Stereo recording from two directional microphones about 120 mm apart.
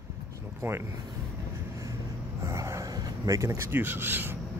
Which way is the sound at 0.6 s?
20° right (ahead or behind).